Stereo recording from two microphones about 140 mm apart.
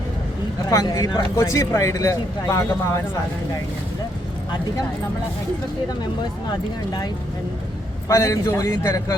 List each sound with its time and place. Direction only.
0.7 s speech: 25° left (ahead or behind)
8.0 s speech: 20° left (ahead or behind)